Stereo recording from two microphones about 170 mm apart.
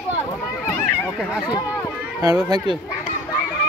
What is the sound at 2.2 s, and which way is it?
Speech, 25° right (ahead or behind).